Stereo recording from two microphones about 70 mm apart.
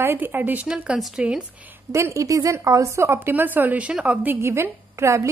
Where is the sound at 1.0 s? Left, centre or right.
Centre.